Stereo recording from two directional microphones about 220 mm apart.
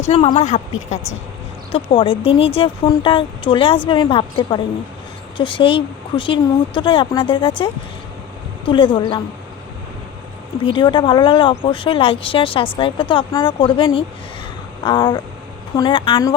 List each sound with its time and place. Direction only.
0.1 s speech: 25° left (ahead or behind)
10.6 s speech: 20° left (ahead or behind)